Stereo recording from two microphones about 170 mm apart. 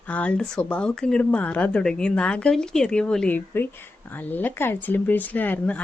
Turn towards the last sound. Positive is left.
turn(degrees=10)  # may be behind; listen again after turning